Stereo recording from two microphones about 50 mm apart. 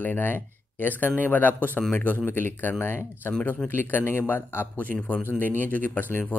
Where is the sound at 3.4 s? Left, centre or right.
Left.